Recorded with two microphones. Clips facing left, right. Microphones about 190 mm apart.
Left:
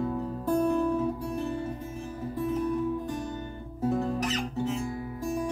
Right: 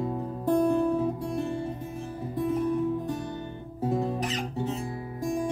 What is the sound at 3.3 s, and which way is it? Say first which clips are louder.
Guitar: right 1 dB; 20° right (ahead or behind).